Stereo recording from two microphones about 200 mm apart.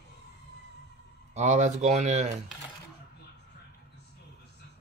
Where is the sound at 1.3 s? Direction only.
35° right (ahead or behind).